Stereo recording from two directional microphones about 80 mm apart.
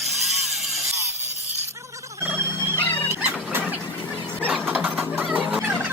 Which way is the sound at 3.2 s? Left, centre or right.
Centre.